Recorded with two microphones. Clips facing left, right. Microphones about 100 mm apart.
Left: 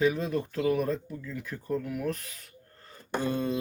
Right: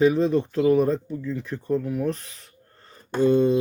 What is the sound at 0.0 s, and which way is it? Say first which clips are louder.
Speech: right 8 dB; 30° right (ahead or behind).